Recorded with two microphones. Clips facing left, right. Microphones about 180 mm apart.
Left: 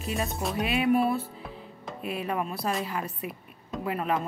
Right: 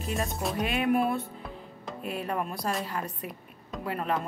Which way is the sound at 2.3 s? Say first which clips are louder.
Left 2 dB; 5° left (ahead or behind).